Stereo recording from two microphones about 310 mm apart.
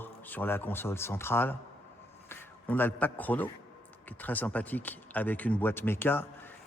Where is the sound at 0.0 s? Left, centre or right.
Centre.